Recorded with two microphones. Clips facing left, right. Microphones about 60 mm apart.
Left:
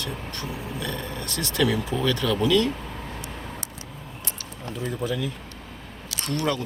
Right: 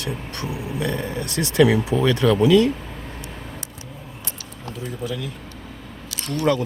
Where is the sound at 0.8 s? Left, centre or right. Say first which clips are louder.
Right 8 dB; centre.